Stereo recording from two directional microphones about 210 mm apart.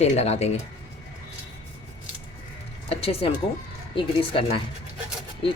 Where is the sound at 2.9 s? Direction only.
25° left (ahead or behind).